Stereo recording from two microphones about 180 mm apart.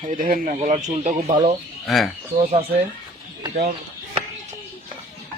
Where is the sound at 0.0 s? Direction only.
50° right (ahead or behind).